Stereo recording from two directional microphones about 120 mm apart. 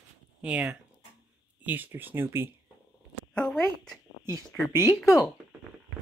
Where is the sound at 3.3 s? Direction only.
5° left (ahead or behind).